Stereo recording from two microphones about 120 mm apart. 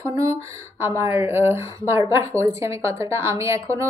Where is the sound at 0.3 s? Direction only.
25° right (ahead or behind).